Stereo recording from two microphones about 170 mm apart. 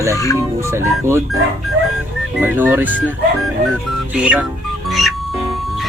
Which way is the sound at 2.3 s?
10° right (ahead or behind).